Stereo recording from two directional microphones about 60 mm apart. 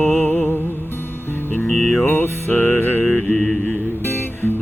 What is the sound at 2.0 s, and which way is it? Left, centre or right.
Music, left.